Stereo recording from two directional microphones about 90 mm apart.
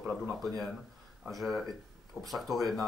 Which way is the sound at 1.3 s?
Centre (ahead or behind).